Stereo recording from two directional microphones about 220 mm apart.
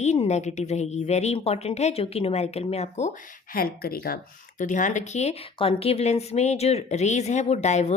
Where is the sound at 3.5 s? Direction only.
40° left (ahead or behind).